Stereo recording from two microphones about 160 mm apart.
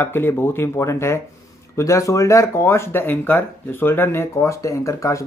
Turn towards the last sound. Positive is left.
turn(degrees=20)  # may be behind; listen again after turning